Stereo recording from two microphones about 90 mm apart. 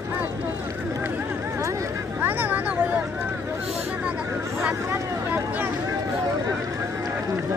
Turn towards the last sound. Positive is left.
turn(degrees=-20)  # may be behind; listen again after turning